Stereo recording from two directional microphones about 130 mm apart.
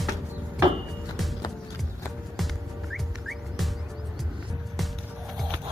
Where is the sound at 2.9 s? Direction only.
Centre (ahead or behind).